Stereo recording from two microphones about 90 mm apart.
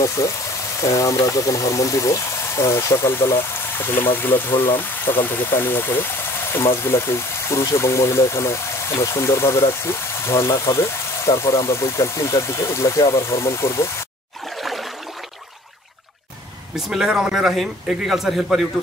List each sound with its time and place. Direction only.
0.2 s speech: 35° left (ahead or behind)
14.4 s a sound: centre (ahead or behind)
16.7 s a man's voice: 5° right (ahead or behind)